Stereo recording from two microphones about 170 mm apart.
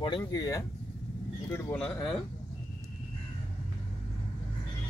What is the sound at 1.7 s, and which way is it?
Speech, 5° left (ahead or behind).